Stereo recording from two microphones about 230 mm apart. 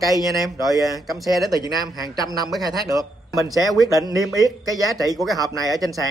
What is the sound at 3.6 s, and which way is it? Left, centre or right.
Speech, centre.